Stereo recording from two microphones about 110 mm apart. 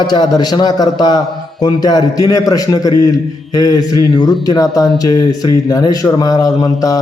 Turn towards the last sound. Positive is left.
turn(degrees=35)  # may be behind; listen again after turning